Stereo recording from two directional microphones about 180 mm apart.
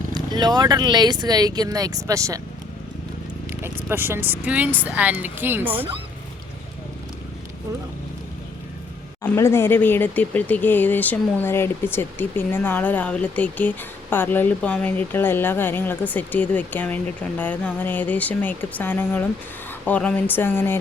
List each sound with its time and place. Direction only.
0.1 s speech: 25° right (ahead or behind)
3.5 s speech: 10° right (ahead or behind)
9.2 s speech: 15° left (ahead or behind)